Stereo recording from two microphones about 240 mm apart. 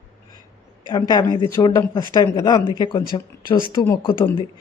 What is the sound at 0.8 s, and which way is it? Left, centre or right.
Speech, centre.